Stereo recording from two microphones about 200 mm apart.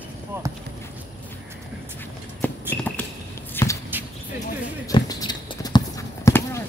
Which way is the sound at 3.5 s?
15° left (ahead or behind).